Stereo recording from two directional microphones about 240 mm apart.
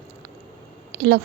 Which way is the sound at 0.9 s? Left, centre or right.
Right.